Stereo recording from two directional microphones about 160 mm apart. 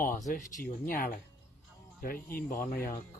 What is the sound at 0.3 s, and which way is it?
Speech, 65° left (ahead or behind).